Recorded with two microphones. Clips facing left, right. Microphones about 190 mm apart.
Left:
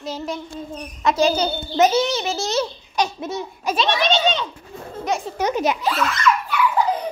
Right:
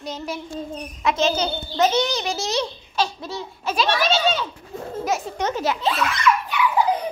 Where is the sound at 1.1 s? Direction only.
10° left (ahead or behind).